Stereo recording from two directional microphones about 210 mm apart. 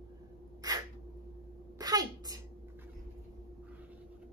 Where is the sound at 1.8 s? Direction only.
15° right (ahead or behind).